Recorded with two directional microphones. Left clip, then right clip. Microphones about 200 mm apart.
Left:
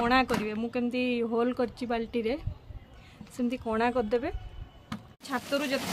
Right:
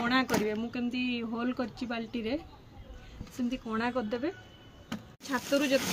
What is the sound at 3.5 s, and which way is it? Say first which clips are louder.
Speech: left 5 dB; 60° left (ahead or behind).